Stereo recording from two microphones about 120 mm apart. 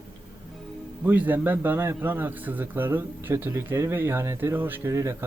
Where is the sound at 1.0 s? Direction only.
15° right (ahead or behind).